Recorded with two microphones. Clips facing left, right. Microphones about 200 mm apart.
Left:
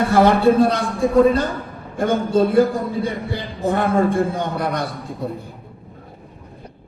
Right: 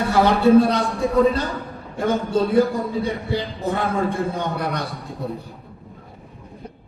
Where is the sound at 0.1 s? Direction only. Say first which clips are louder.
Right 1 dB; 50° left (ahead or behind).